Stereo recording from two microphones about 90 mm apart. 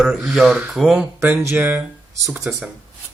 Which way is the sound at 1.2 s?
20° right (ahead or behind).